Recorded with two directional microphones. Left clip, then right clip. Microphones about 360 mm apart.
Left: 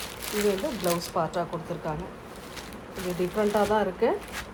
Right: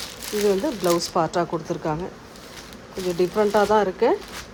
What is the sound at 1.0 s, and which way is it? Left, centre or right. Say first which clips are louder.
Speech: right 6 dB; right.